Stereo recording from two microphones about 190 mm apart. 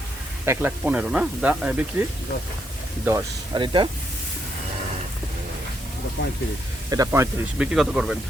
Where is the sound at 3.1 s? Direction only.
20° right (ahead or behind).